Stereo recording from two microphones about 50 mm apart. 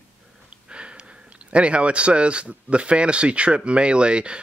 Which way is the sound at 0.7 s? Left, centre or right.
Right.